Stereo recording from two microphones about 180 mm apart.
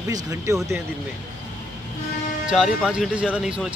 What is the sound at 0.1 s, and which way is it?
Speech, 20° right (ahead or behind).